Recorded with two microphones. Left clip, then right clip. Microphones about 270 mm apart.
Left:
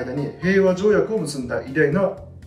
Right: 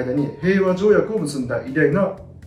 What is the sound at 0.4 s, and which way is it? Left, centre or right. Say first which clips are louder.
A man's voice: left 2 dB; centre.